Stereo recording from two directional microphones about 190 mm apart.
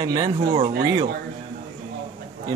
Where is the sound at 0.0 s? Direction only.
25° right (ahead or behind).